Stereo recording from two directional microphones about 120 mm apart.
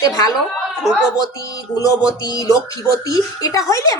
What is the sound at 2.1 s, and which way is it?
A woman's voice, 30° left (ahead or behind).